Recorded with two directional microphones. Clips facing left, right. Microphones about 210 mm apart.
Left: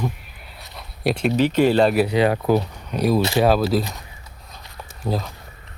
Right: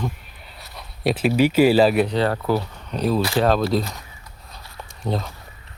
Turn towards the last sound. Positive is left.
turn(degrees=0)  # may be behind; listen again after turning